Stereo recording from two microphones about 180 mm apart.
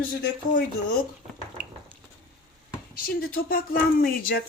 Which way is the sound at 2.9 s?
55° left (ahead or behind).